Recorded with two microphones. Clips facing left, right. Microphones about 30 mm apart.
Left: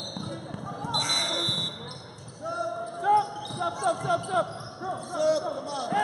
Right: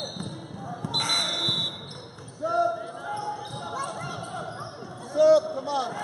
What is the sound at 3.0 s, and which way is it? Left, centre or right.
Basketball bounce, left.